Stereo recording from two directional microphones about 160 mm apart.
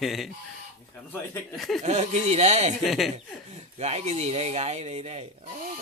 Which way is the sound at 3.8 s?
45° right (ahead or behind).